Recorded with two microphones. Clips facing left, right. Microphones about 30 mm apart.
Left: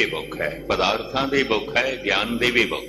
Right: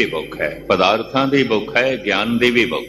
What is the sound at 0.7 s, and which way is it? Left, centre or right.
Speech, centre.